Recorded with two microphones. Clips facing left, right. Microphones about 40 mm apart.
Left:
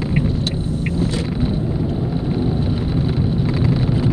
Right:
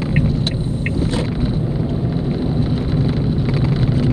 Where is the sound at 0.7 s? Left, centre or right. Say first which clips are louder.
Right 1 dB; right.